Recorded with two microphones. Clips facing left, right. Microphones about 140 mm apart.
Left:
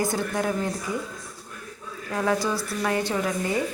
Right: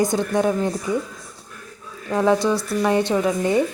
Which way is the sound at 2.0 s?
25° right (ahead or behind).